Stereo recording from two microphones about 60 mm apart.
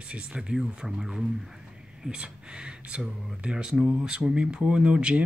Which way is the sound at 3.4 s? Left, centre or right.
Centre.